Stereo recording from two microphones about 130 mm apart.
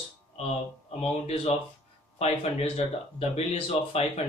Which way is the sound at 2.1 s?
50° left (ahead or behind).